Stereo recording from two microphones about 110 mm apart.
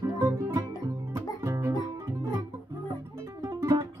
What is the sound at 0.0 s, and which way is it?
Music, 35° right (ahead or behind).